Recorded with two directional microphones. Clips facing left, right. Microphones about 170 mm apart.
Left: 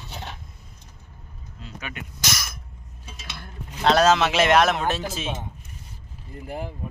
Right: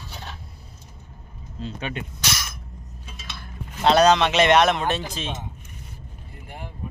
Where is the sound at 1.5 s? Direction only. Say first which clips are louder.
Right 6 dB; 30° right (ahead or behind).